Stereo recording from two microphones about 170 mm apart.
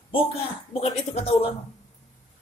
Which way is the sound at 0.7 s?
35° left (ahead or behind).